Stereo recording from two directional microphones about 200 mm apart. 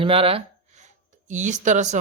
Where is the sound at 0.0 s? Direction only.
30° right (ahead or behind).